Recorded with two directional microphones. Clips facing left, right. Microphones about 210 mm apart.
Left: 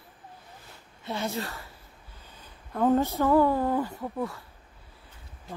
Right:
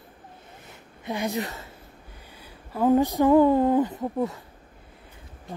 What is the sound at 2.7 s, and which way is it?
Speech, 10° right (ahead or behind).